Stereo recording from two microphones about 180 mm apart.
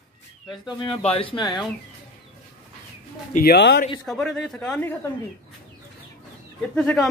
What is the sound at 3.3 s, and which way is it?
Speech, 60° left (ahead or behind).